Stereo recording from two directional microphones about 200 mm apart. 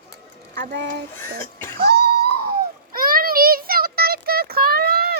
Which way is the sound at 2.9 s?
45° right (ahead or behind).